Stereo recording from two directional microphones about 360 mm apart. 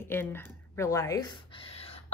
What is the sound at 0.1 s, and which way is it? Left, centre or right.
A woman's voice, centre.